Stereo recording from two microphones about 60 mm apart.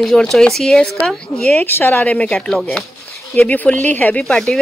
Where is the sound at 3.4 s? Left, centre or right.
Left; by 4.5 s centre.